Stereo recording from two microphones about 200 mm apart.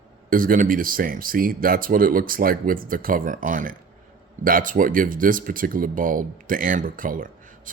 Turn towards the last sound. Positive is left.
turn(degrees=-45)  # may be behind; listen again after turning